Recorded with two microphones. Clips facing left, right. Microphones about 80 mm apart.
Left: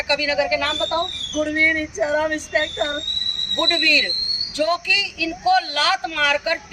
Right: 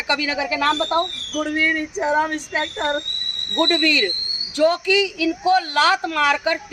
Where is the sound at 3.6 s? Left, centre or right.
Right.